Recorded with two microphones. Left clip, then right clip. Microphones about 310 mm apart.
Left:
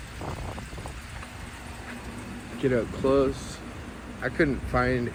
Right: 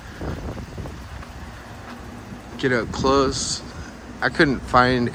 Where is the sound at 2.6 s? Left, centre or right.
Centre.